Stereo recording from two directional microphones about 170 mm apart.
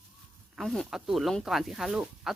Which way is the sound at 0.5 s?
Centre (ahead or behind).